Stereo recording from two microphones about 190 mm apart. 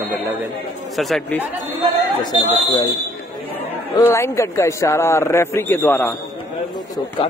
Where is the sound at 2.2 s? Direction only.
20° left (ahead or behind).